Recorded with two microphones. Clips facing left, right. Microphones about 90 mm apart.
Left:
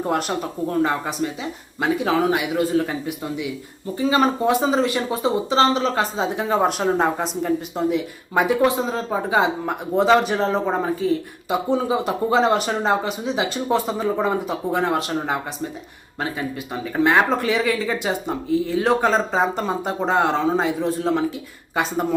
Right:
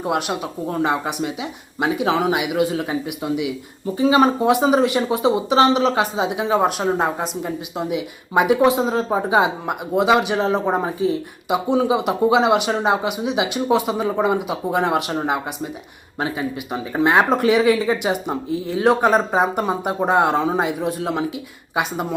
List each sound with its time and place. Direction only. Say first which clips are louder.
0.0 s speech: even; 5° right (ahead or behind)